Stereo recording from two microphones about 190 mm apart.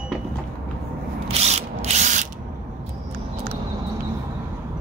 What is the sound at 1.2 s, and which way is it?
Ratchet, 35° right (ahead or behind).